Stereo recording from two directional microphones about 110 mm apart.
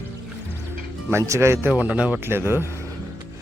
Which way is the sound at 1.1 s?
25° right (ahead or behind).